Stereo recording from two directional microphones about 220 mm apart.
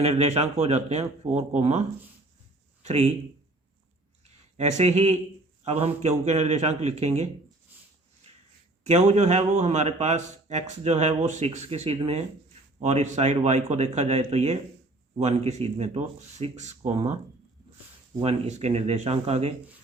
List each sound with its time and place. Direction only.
0.0 s speech: 30° right (ahead or behind)
2.8 s speech: 30° right (ahead or behind)
4.2 s a sound: 30° right (ahead or behind)
5.6 s speech: 30° right (ahead or behind)
8.8 s speech: 30° right (ahead or behind)
18.2 s speech: 30° right (ahead or behind)